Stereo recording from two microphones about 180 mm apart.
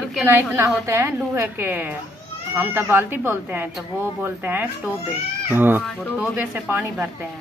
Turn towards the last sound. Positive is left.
turn(degrees=-10)  # may be behind; listen again after turning